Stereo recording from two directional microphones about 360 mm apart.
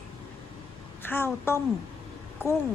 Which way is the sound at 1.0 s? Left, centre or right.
Centre.